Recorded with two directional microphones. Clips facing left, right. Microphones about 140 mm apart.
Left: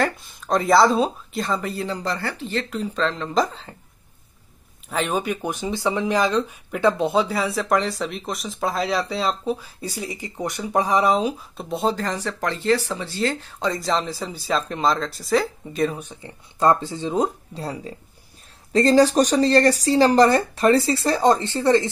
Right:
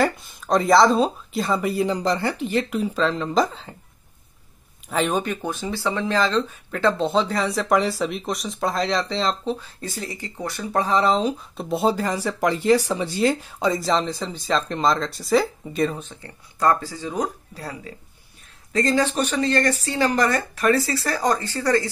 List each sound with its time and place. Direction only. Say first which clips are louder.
0.0 s speech: right 2 dB; centre (ahead or behind)
4.8 s speech: right 1 dB; 5° left (ahead or behind)
11.7 s speech: right 2 dB; 5° right (ahead or behind)
16.0 s speech: left 1 dB; 15° left (ahead or behind)